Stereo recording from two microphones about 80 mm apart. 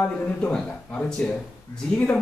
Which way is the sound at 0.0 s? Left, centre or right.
Centre.